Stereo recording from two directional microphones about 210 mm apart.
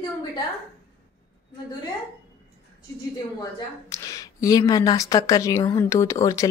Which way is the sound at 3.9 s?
15° left (ahead or behind).